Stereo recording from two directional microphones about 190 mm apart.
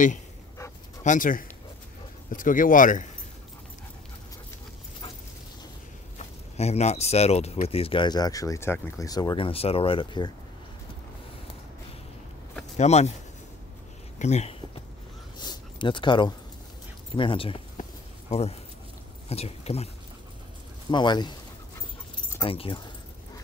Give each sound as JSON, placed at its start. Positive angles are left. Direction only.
{"t": 1.0, "sound": "speech", "side_deg": 45}
{"t": 6.1, "sound": "speech", "side_deg": 35}
{"t": 12.7, "sound": "speech", "side_deg": 35}
{"t": 14.1, "sound": "speech", "side_deg": 35}
{"t": 15.3, "sound": "a sound", "side_deg": 20}
{"t": 17.1, "sound": "speech", "side_deg": 25}
{"t": 20.9, "sound": "speech", "side_deg": 25}
{"t": 22.4, "sound": "speech", "side_deg": 25}